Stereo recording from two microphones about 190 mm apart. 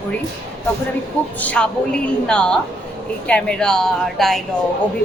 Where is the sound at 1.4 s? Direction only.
5° left (ahead or behind).